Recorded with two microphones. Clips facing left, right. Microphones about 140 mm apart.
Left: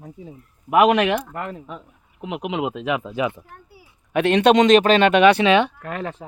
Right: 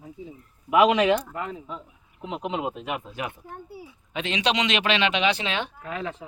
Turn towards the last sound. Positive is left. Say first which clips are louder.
# left 3 dB
turn(degrees=50)  # may be behind; listen again after turning